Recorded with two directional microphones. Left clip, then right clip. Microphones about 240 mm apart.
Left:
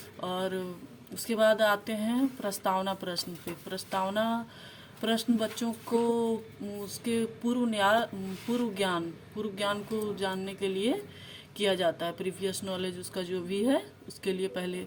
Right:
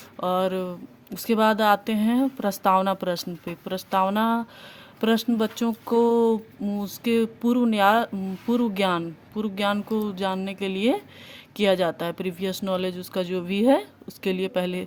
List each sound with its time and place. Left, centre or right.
0.2 s a woman's voice: right